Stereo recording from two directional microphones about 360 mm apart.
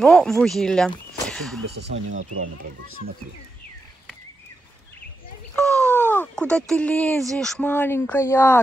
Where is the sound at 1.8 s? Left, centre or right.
Right.